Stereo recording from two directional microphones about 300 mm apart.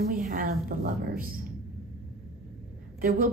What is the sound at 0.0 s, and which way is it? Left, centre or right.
A woman's voice, right.